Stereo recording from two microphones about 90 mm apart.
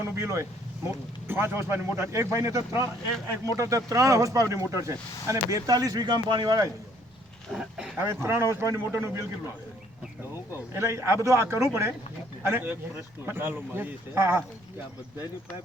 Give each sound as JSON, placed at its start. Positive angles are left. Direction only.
{"t": 0.0, "sound": "speech", "side_deg": -30}
{"t": 7.5, "sound": "speech", "side_deg": -5}
{"t": 7.9, "sound": "speech", "side_deg": -30}
{"t": 10.5, "sound": "speech", "side_deg": -30}